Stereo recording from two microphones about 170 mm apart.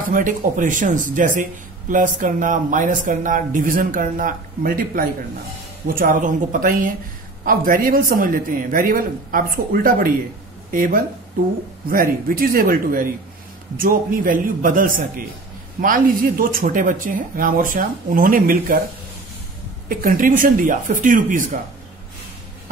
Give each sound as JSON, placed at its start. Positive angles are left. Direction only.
{"t": 0.0, "sound": "speech", "side_deg": -55}
{"t": 19.9, "sound": "speech", "side_deg": -55}